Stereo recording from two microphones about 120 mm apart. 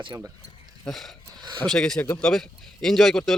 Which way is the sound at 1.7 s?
5° left (ahead or behind).